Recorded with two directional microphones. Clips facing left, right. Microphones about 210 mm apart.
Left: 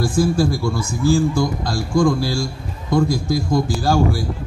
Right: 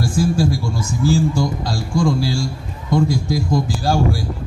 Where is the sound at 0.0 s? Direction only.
55° left (ahead or behind).